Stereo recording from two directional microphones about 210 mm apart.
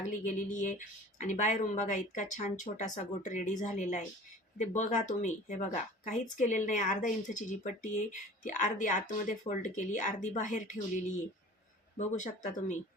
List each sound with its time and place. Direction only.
0.1 s speech: 35° left (ahead or behind)
11.9 s speech: 35° left (ahead or behind)